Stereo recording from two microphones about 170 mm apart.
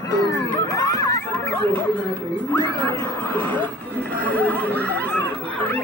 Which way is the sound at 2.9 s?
10° left (ahead or behind).